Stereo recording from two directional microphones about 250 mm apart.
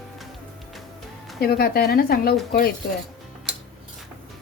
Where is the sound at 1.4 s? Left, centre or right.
Left.